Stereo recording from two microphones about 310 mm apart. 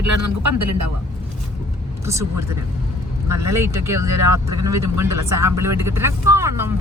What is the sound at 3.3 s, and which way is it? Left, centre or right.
Speech, right.